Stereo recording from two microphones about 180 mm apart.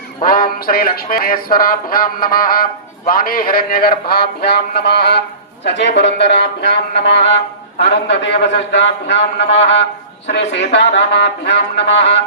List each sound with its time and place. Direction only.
0.2 s a man's voice: 50° left (ahead or behind); by 5.2 s 65° left (ahead or behind)
5.6 s a man's voice: 80° left